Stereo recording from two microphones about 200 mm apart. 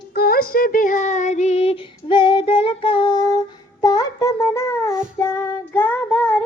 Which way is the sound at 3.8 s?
20° left (ahead or behind).